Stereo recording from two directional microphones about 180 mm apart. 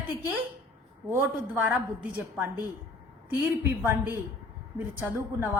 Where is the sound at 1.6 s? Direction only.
10° right (ahead or behind).